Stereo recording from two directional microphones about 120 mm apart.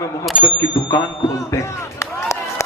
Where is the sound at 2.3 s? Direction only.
25° left (ahead or behind).